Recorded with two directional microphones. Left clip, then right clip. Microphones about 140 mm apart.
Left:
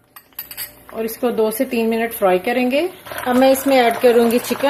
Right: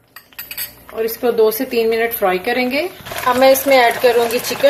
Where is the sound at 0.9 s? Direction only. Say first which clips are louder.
Right 4 dB; 50° left (ahead or behind).